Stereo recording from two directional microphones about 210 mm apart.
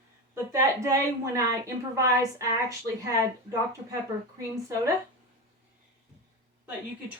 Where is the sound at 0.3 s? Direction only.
10° right (ahead or behind).